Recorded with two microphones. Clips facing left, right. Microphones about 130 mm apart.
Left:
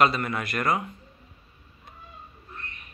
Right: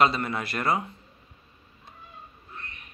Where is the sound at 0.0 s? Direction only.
25° right (ahead or behind).